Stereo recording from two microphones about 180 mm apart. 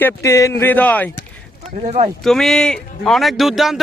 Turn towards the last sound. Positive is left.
turn(degrees=0)  # may be behind; listen again after turning